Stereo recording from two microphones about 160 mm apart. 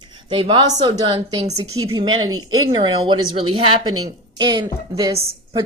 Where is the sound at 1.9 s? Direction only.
30° right (ahead or behind).